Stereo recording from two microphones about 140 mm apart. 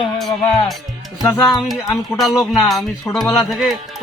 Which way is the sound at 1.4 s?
Centre (ahead or behind).